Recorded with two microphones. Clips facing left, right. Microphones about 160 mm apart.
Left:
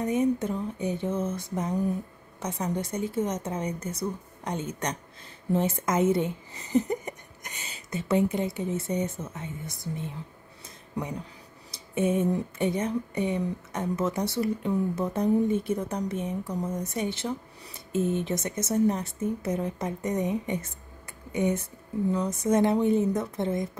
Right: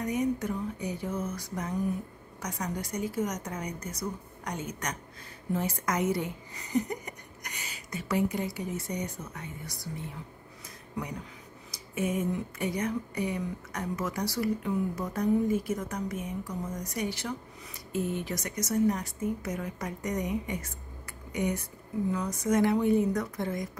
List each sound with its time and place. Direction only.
0.0 s speech: 25° left (ahead or behind)
11.7 s speech: 30° left (ahead or behind)